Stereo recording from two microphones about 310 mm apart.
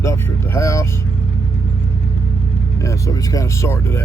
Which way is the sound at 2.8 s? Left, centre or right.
Centre.